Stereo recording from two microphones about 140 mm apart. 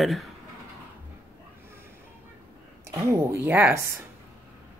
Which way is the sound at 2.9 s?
20° right (ahead or behind).